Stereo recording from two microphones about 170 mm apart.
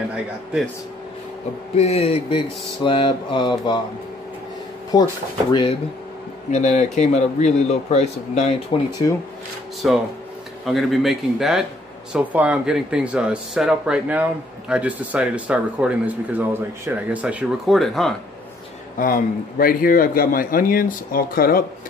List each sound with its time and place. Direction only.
1.8 s speech: 40° left (ahead or behind)
4.9 s speech: 25° left (ahead or behind)
6.5 s a man's voice: 45° left (ahead or behind)
9.8 s speech: 5° right (ahead or behind)
18.9 s speech: 55° left (ahead or behind)